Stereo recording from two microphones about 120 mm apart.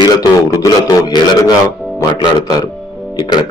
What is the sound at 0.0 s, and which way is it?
A man's voice, 35° left (ahead or behind).